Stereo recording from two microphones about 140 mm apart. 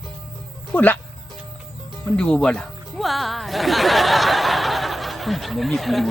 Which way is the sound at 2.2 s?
5° left (ahead or behind).